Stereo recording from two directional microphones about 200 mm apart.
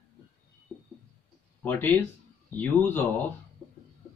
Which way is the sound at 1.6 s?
10° left (ahead or behind).